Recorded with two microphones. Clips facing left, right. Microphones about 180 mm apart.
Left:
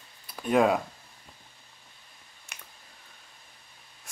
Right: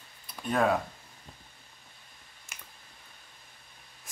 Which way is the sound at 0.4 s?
10° left (ahead or behind).